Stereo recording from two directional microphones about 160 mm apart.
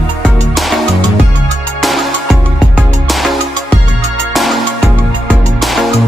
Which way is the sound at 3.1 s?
Centre (ahead or behind).